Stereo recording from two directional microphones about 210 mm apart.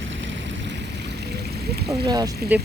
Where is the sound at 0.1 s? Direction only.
60° right (ahead or behind).